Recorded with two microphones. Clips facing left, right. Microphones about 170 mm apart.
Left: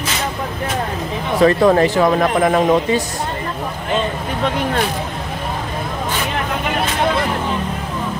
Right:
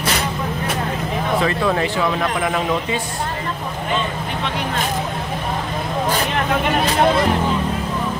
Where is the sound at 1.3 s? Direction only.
40° left (ahead or behind).